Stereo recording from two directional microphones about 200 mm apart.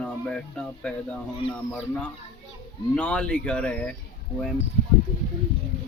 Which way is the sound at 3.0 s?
5° left (ahead or behind).